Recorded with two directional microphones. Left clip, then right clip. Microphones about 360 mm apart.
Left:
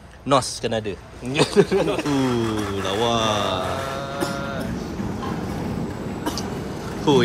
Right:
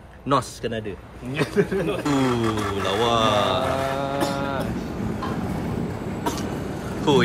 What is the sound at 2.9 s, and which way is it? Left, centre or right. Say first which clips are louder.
Speech: right 1 dB; centre.